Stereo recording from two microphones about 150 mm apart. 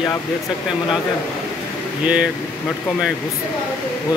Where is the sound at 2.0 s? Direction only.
5° right (ahead or behind).